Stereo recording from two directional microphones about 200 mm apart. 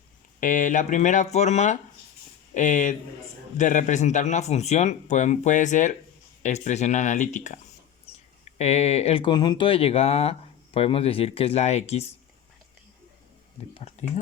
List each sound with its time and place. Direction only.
0.3 s speech: 40° left (ahead or behind)